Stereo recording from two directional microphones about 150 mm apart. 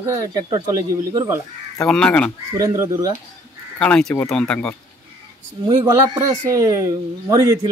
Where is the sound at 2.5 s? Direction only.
20° right (ahead or behind).